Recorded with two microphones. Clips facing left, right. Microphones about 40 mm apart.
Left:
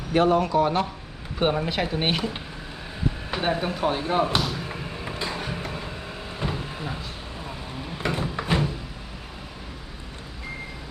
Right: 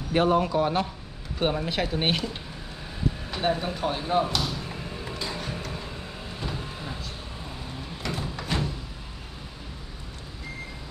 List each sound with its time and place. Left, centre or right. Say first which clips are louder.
0.3 s a man's voice: left 2 dB; centre
1.4 s speech: left 3 dB; centre
3.3 s speech: left 2 dB; centre
4.3 s a sound: left 3 dB; left
6.4 s vehicle: left 5 dB; centre
7.9 s a sound: left 6 dB; left